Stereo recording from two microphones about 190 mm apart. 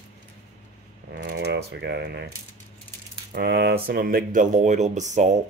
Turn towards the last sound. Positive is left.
turn(degrees=-40)  # may be behind; listen again after turning